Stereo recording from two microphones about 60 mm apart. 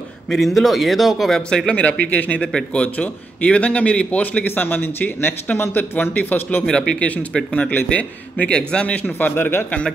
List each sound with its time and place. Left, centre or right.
0.3 s speech: centre
1.8 s a man's voice: left
2.4 s a man's voice: centre; by 6.6 s left
6.9 s a man's voice: centre
9.3 s speech: left